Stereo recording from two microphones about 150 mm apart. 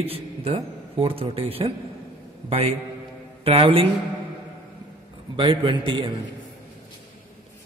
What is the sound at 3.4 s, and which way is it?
Speech, 40° right (ahead or behind).